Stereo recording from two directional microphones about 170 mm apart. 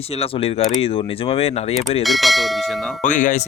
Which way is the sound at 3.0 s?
45° left (ahead or behind).